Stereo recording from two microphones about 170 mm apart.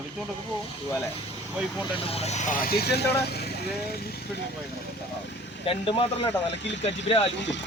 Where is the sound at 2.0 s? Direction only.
35° left (ahead or behind); by 4.1 s 70° left (ahead or behind).